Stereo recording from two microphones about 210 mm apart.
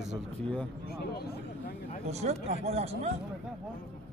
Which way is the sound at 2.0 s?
30° right (ahead or behind).